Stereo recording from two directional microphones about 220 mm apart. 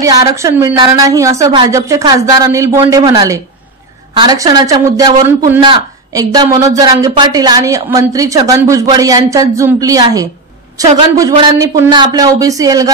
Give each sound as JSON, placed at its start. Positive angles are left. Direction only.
{"t": 0.0, "sound": "speech", "side_deg": -15}